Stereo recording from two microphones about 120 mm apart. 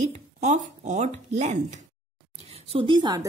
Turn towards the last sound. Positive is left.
turn(degrees=-35)  # may be behind; listen again after turning